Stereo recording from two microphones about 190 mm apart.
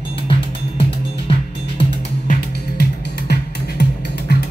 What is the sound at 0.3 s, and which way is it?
Music, 25° left (ahead or behind).